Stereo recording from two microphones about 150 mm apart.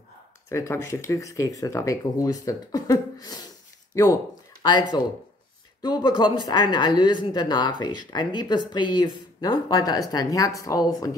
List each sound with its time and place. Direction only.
0.5 s a woman's voice: 20° left (ahead or behind)